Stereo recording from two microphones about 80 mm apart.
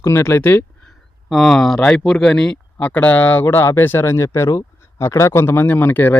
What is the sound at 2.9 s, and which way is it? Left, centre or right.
Speech, left.